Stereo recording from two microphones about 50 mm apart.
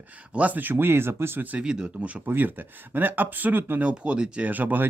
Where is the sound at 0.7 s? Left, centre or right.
Right.